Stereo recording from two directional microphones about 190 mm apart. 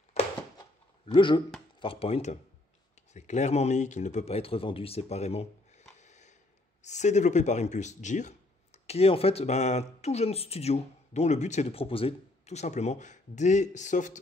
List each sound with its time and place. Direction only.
1.1 s speech: 25° left (ahead or behind)
5.9 s a sound: 40° left (ahead or behind)
6.8 s speech: 35° left (ahead or behind)